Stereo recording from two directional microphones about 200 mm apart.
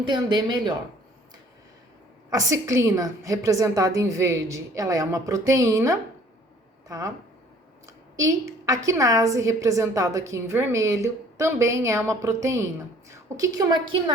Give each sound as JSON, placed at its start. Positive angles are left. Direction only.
{"t": 0.0, "sound": "speech", "side_deg": -25}
{"t": 2.3, "sound": "a woman's voice", "side_deg": -15}
{"t": 8.1, "sound": "a woman's voice", "side_deg": -15}